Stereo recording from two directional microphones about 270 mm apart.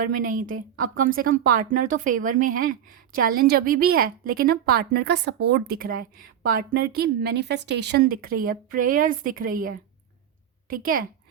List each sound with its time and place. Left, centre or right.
0.0 s speech: right